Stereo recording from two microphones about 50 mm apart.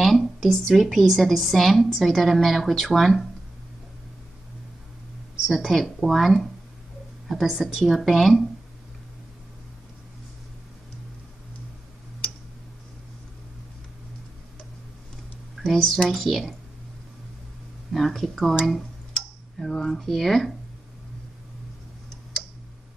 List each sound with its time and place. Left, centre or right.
0.0 s a woman's voice: centre
5.5 s a woman's voice: centre
7.5 s a woman's voice: centre
15.5 s a woman's voice: centre
17.9 s a woman's voice: centre
19.6 s a woman's voice: centre